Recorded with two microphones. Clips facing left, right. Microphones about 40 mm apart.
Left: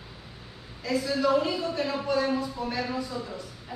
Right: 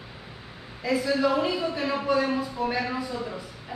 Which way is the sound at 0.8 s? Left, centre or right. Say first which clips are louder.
Right 3 dB; centre.